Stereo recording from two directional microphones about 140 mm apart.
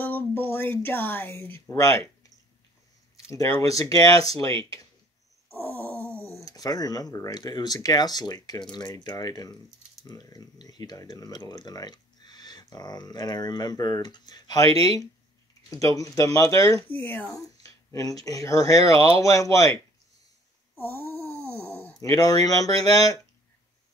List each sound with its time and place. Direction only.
0.0 s speech: 15° left (ahead or behind)
5.6 s groan: 15° left (ahead or behind)
5.9 s a sound: 15° right (ahead or behind)
6.4 s speech: 25° left (ahead or behind)
15.7 s speech: 25° left (ahead or behind)
16.8 s speech: 15° left (ahead or behind)
20.7 s a sound: 15° left (ahead or behind)
22.0 s speech: 25° left (ahead or behind)